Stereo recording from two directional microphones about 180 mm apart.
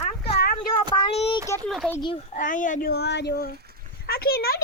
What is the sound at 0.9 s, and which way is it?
Child singing, 30° left (ahead or behind).